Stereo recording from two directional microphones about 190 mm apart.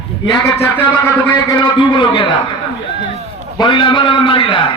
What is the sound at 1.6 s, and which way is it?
Speech, 25° left (ahead or behind).